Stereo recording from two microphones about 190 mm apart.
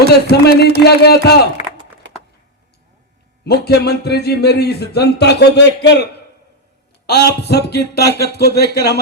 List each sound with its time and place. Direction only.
0.1 s speech: 60° left (ahead or behind)
1.6 s a sound: 35° left (ahead or behind)
3.4 s speech: 60° left (ahead or behind)
7.1 s speech: 60° left (ahead or behind)